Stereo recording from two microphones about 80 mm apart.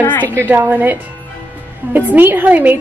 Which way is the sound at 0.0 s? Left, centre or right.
Left.